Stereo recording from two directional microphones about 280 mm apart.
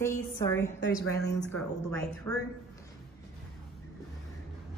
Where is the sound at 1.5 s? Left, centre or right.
Centre.